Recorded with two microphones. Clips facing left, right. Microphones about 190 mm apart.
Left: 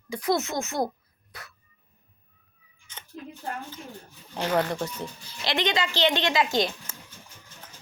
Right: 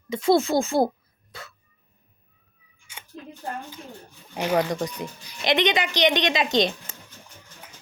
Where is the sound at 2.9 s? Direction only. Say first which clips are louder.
Right 1 dB; 10° right (ahead or behind).